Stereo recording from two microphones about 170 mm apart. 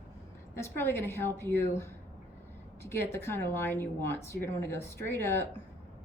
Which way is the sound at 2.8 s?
15° left (ahead or behind).